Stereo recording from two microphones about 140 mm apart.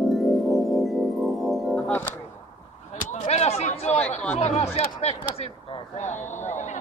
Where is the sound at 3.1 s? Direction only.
50° left (ahead or behind).